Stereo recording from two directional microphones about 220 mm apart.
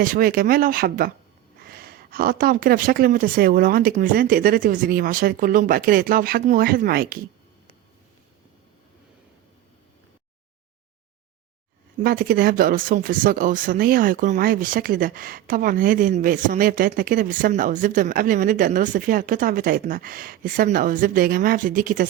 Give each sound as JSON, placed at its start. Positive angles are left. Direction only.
{"t": 0.0, "sound": "speech", "side_deg": -40}
{"t": 12.0, "sound": "speech", "side_deg": -45}